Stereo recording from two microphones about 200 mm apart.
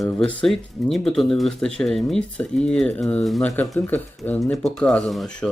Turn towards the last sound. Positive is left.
turn(degrees=0)  # may be behind; listen again after turning